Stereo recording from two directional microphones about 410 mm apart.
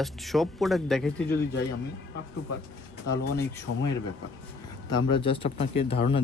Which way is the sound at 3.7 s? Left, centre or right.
Left.